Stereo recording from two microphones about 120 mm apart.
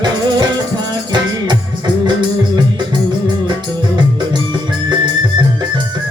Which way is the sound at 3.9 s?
40° right (ahead or behind).